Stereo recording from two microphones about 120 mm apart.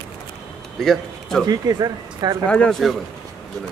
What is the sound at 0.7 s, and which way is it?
Speech, centre (ahead or behind).